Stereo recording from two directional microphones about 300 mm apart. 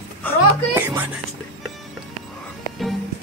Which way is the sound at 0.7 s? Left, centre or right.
Centre.